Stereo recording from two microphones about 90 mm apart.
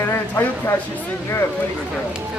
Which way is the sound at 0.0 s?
25° left (ahead or behind).